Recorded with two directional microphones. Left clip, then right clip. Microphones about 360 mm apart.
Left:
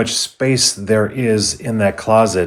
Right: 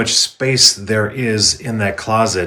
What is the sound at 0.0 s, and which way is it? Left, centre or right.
Speech, centre.